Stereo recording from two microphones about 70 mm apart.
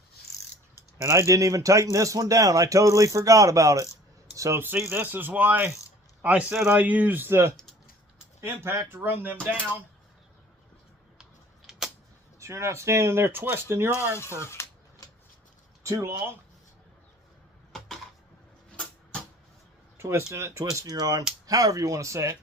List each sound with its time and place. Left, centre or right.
1.0 s speech: right
4.6 s speech: right
7.3 s speech: right
7.5 s typing: centre
8.4 s speech: right
11.2 s a sound: centre
12.4 s speech: right
14.4 s speech: left
15.8 s speech: right
17.7 s a sound: centre
20.0 s speech: right
20.8 s speech: right